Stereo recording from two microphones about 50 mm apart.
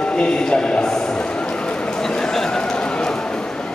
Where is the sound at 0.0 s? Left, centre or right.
Centre.